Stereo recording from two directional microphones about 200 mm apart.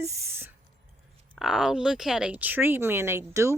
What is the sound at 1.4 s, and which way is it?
Speech, centre (ahead or behind).